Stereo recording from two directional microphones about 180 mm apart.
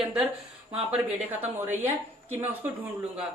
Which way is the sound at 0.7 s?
30° right (ahead or behind).